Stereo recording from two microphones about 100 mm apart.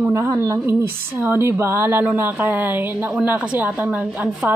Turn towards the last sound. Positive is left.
turn(degrees=-15)  # may be behind; listen again after turning